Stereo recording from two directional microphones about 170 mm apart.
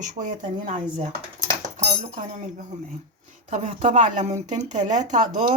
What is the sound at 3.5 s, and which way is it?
Speech, 45° right (ahead or behind).